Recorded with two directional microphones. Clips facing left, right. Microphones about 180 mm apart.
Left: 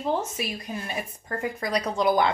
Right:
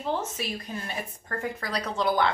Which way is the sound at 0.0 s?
10° left (ahead or behind).